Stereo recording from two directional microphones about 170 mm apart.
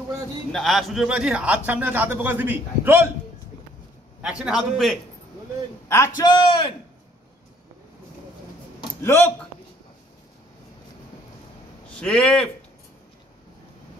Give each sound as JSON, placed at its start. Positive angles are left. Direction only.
{"t": 0.5, "sound": "a man's voice", "side_deg": 0}
{"t": 4.2, "sound": "a man's voice", "side_deg": -5}
{"t": 5.9, "sound": "a man's voice", "side_deg": 15}
{"t": 9.0, "sound": "a man's voice", "side_deg": 15}
{"t": 12.0, "sound": "a man's voice", "side_deg": 5}